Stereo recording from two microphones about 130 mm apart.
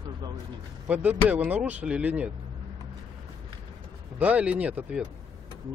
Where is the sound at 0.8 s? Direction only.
10° right (ahead or behind).